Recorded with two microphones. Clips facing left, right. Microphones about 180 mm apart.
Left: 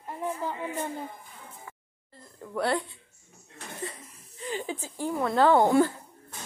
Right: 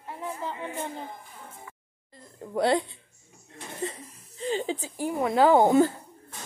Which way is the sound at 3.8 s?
25° right (ahead or behind).